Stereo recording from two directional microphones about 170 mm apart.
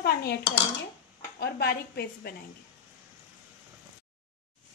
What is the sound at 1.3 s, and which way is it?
Speech, 70° left (ahead or behind).